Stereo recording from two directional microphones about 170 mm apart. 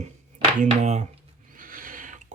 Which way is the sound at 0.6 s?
45° right (ahead or behind).